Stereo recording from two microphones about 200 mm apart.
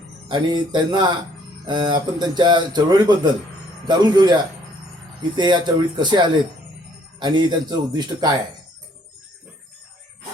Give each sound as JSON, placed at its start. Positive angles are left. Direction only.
{"t": 0.3, "sound": "speech", "side_deg": -20}
{"t": 5.4, "sound": "speech", "side_deg": -20}